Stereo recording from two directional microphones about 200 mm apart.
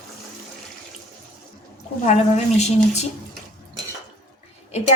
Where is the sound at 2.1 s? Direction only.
35° left (ahead or behind).